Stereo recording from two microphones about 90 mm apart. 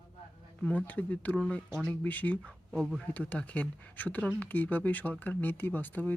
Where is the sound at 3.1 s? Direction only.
15° left (ahead or behind).